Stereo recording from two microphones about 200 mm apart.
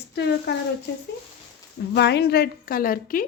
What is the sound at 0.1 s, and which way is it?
Speech, 60° left (ahead or behind).